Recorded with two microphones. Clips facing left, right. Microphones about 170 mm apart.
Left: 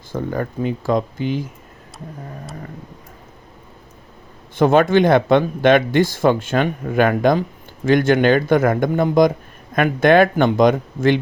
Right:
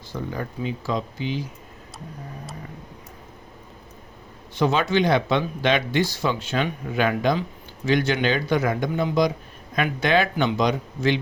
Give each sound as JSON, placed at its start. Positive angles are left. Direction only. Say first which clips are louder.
{"t": 0.1, "sound": "speech", "louder": "left 7 dB", "side_deg": 50}
{"t": 4.5, "sound": "speech", "louder": "left 7 dB", "side_deg": 50}